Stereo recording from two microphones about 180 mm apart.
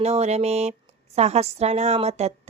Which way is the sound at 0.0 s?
35° right (ahead or behind).